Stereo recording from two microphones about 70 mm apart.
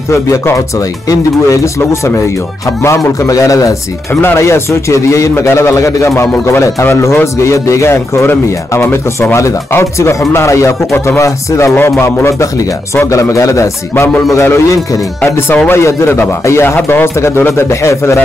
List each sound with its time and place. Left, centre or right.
0.1 s speech: left
4.1 s speech: left
11.7 s speech: left
14.4 s speech: left